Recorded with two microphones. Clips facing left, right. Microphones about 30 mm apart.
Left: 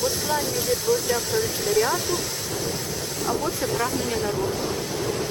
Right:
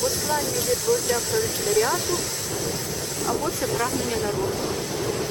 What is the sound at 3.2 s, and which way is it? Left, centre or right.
Speech, centre.